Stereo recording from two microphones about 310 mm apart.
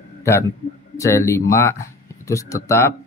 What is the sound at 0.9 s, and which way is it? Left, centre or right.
Speech, centre.